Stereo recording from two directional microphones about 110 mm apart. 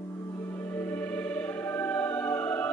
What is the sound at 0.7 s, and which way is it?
Music, 15° left (ahead or behind).